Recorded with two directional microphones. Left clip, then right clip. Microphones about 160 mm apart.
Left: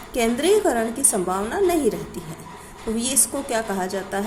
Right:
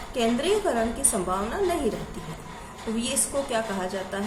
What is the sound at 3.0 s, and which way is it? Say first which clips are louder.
A woman's voice: left 1 dB; 40° left (ahead or behind).